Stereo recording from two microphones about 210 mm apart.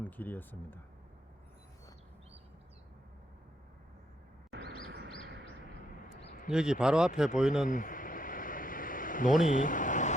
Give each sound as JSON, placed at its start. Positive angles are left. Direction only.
{"t": 0.0, "sound": "speech", "side_deg": 10}
{"t": 4.5, "sound": "bird", "side_deg": -50}
{"t": 6.5, "sound": "speech", "side_deg": -5}
{"t": 7.7, "sound": "a sound", "side_deg": 40}
{"t": 9.5, "sound": "vehicle", "side_deg": 40}